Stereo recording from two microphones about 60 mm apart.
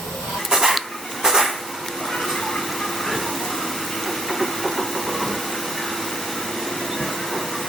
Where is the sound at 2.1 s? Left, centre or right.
Centre.